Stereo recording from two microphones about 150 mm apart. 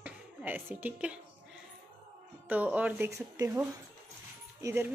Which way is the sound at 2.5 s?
10° right (ahead or behind).